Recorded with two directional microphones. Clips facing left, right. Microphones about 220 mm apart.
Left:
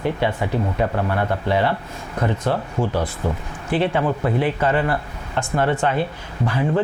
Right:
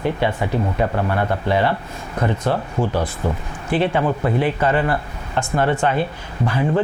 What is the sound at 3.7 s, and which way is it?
Speech, 15° right (ahead or behind).